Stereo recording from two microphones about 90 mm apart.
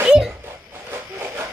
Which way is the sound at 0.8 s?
25° right (ahead or behind).